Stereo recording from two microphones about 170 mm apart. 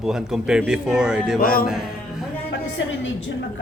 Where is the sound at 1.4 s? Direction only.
60° left (ahead or behind).